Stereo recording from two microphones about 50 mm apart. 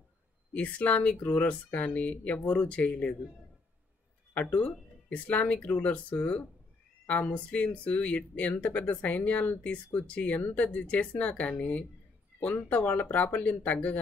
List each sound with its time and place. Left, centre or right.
0.6 s speech: left
4.3 s speech: left